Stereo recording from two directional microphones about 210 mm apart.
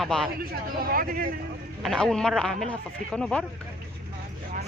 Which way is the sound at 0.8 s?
45° right (ahead or behind).